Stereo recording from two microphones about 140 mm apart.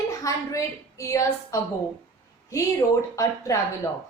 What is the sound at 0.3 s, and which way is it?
A woman's voice, 25° left (ahead or behind).